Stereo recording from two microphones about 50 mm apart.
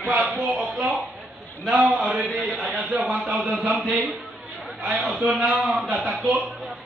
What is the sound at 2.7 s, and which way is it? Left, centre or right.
Speech, right.